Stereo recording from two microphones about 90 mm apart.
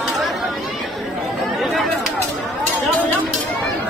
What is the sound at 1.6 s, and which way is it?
Chatter, centre (ahead or behind).